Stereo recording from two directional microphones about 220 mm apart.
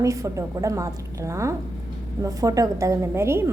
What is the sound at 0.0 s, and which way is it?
A woman's voice, 15° right (ahead or behind).